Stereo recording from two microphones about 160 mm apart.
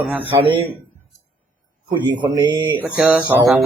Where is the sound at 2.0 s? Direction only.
25° right (ahead or behind).